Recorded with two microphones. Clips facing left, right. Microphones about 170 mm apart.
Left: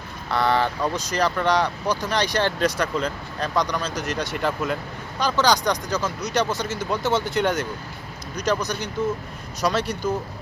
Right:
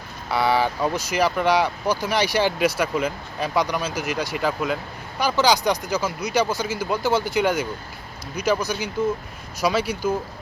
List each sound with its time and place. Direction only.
0.3 s speech: 5° right (ahead or behind)